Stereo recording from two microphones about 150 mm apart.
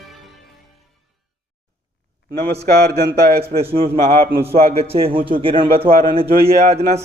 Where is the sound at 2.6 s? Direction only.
90° right.